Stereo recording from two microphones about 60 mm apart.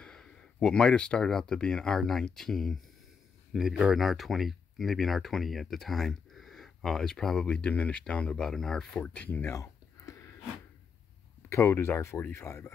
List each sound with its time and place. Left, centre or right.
0.0 s speech: centre
3.5 s speech: centre
7.4 s speech: centre
9.5 s a sound: left
11.4 s speech: left